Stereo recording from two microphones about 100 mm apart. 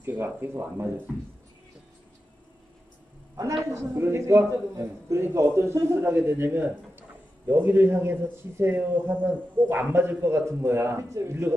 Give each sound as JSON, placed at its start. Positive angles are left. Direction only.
{"t": 0.0, "sound": "a man's voice", "side_deg": -20}
{"t": 3.7, "sound": "a man's voice", "side_deg": -25}